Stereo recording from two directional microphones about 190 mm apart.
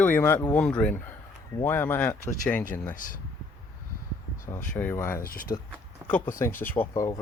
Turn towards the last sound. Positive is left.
turn(degrees=15)  # may be behind; listen again after turning